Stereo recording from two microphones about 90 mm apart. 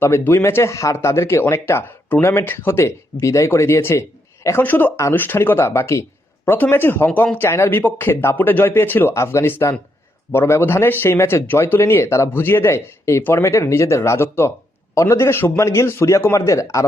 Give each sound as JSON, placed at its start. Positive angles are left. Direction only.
{"t": 0.0, "sound": "a man's voice", "side_deg": 30}